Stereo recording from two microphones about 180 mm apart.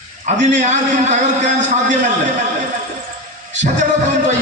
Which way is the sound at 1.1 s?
40° right (ahead or behind).